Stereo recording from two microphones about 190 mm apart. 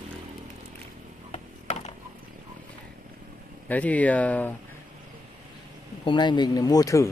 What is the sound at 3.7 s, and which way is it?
Speech, 10° left (ahead or behind).